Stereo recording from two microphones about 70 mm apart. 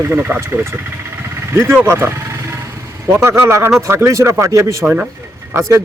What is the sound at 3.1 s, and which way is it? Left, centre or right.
Speech, right.